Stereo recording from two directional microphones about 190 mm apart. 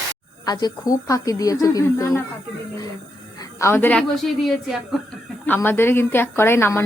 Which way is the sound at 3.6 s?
10° left (ahead or behind).